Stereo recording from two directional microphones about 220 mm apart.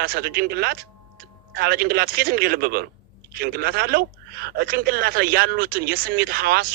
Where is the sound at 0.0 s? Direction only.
45° right (ahead or behind).